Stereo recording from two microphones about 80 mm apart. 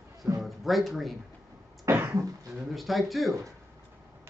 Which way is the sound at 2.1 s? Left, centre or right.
Right.